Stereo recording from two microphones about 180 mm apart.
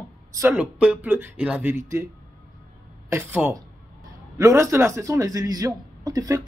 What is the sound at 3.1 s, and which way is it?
A man's voice, 10° right (ahead or behind).